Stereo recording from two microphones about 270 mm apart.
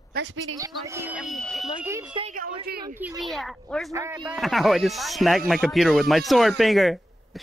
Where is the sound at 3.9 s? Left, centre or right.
Centre.